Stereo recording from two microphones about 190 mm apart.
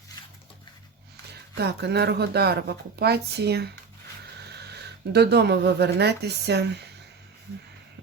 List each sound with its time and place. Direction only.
1.5 s speech: 60° right (ahead or behind)